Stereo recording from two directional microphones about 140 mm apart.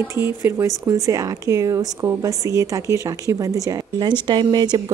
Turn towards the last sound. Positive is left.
turn(degrees=-35)  # may be behind; listen again after turning